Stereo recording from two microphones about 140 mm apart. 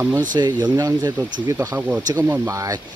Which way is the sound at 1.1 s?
15° right (ahead or behind).